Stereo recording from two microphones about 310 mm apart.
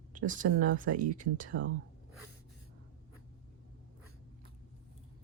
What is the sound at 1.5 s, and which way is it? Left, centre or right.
Speech, right.